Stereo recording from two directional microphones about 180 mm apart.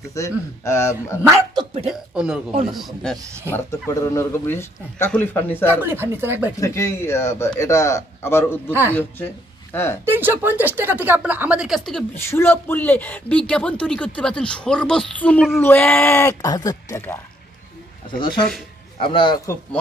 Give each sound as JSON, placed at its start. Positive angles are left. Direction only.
{"t": 0.1, "sound": "speech", "side_deg": 15}
{"t": 1.3, "sound": "dog", "side_deg": -25}
{"t": 1.9, "sound": "speech", "side_deg": -5}
{"t": 3.5, "sound": "speech", "side_deg": 15}
{"t": 5.7, "sound": "speech", "side_deg": -10}
{"t": 6.6, "sound": "speech", "side_deg": 15}
{"t": 10.0, "sound": "speech", "side_deg": -10}
{"t": 12.3, "sound": "speech", "side_deg": 15}
{"t": 18.9, "sound": "speech", "side_deg": 30}